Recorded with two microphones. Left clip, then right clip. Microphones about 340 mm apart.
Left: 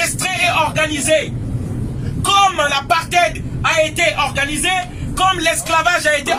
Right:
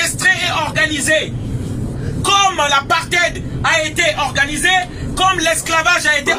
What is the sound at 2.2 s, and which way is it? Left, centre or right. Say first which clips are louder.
A man's voice: even; centre.